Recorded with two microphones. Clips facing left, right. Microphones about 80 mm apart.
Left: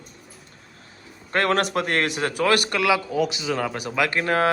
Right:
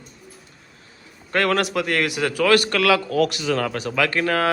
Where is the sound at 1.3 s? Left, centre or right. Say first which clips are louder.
Right 1 dB; left.